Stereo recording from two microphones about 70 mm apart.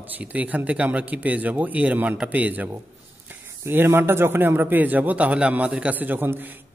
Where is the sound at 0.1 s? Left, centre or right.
Right.